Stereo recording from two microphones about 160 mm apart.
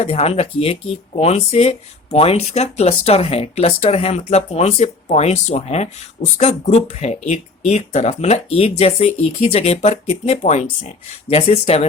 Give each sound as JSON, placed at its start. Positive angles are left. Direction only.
{"t": 0.0, "sound": "speech", "side_deg": 40}